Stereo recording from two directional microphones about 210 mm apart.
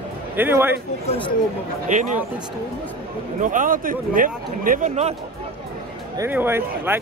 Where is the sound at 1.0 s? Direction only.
25° left (ahead or behind).